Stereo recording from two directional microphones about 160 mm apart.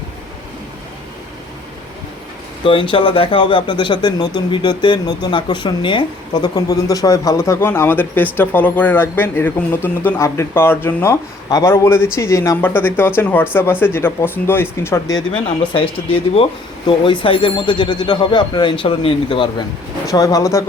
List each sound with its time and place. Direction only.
2.6 s speech: 35° left (ahead or behind); by 15.1 s 15° left (ahead or behind)
15.7 s speech: 35° left (ahead or behind)
20.1 s speech: 20° left (ahead or behind)